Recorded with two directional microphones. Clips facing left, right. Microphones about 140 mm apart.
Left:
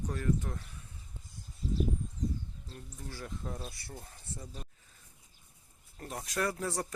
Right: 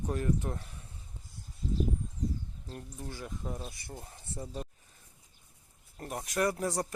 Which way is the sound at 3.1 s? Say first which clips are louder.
Right 1 dB; 15° right (ahead or behind).